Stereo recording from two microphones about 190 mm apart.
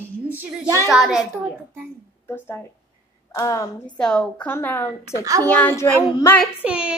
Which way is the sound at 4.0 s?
5° left (ahead or behind).